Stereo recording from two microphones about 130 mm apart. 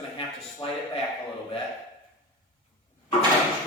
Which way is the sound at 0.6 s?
40° left (ahead or behind).